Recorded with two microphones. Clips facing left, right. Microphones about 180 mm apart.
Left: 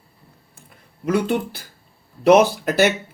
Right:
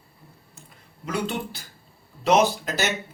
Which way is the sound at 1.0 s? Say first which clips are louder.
Left 8 dB; 55° left (ahead or behind).